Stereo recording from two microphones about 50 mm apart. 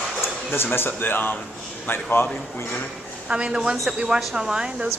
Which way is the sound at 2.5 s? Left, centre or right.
Left.